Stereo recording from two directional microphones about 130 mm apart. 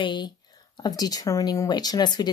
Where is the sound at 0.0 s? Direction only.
40° left (ahead or behind).